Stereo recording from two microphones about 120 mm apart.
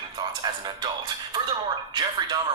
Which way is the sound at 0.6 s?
40° right (ahead or behind).